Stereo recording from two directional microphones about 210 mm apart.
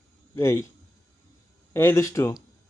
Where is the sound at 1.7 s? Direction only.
10° left (ahead or behind).